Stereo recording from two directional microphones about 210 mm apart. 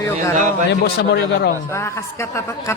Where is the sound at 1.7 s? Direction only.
10° left (ahead or behind).